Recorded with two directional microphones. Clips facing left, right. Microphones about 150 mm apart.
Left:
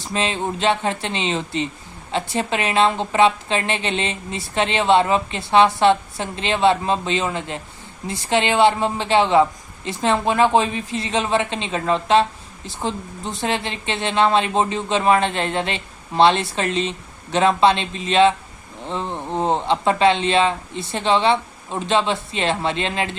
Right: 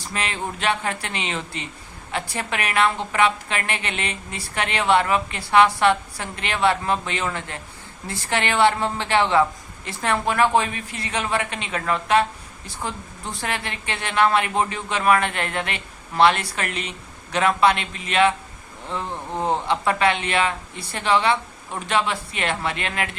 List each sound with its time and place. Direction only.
0.0 s a woman's voice: 25° left (ahead or behind)